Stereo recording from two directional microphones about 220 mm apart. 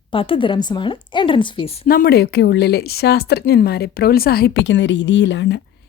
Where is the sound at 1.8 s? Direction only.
40° left (ahead or behind).